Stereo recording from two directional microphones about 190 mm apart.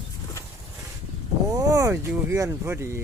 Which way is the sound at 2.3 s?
15° right (ahead or behind).